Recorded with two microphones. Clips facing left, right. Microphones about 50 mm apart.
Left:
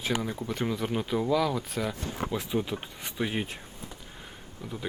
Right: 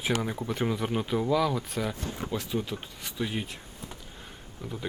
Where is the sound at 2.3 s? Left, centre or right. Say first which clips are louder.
Left 1 dB; centre.